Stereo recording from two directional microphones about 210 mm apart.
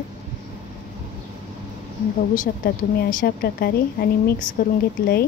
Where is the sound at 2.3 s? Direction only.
40° left (ahead or behind).